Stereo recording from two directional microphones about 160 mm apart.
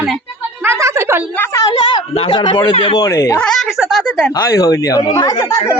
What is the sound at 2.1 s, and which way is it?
Speech, 35° left (ahead or behind).